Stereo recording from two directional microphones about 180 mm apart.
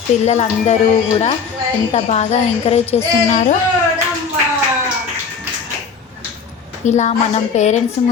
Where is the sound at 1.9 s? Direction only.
35° left (ahead or behind).